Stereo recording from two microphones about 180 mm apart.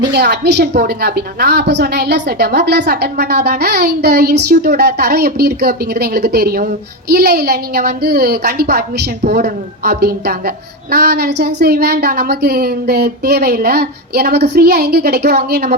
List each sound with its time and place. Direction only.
0.1 s a woman's voice: 65° right (ahead or behind)